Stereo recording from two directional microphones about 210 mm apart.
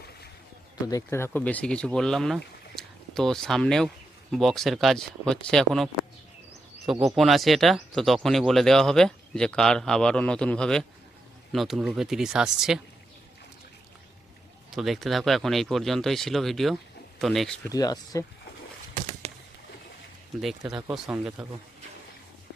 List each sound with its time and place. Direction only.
0.9 s speech: 15° left (ahead or behind); by 12.8 s centre (ahead or behind)
14.7 s speech: centre (ahead or behind)
17.7 s speech: 15° left (ahead or behind)
19.2 s a sound: 30° right (ahead or behind)
20.8 s speech: 5° right (ahead or behind)